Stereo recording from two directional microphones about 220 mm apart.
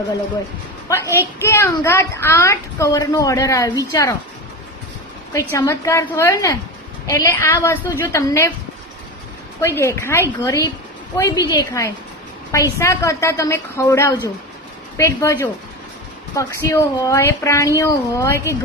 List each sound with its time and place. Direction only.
1.0 s a woman's voice: 10° right (ahead or behind)
1.4 s a woman's voice: 10° left (ahead or behind)
5.3 s a woman's voice: 15° left (ahead or behind)
9.6 s a woman's voice: 10° left (ahead or behind)